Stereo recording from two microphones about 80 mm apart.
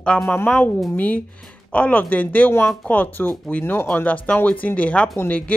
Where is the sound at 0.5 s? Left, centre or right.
Left.